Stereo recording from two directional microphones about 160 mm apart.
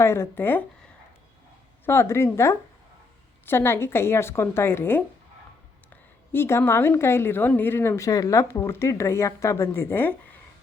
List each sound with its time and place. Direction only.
0.0 s a woman's voice: 15° left (ahead or behind)
1.8 s a woman's voice: 15° left (ahead or behind)
6.3 s a woman's voice: 15° left (ahead or behind)